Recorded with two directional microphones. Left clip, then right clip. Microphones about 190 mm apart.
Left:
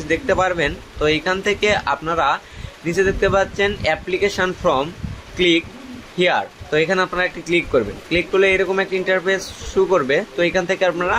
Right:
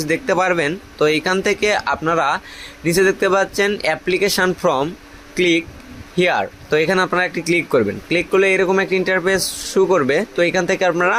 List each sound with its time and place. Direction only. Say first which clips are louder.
0.0 s speech: right 1 dB; 45° right (ahead or behind)